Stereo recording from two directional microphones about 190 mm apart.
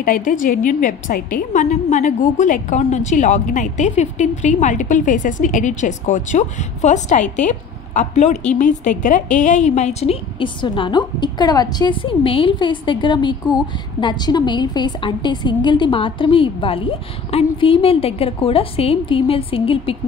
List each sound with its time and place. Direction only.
0.0 s a woman's voice: 45° left (ahead or behind); by 20.0 s 30° left (ahead or behind)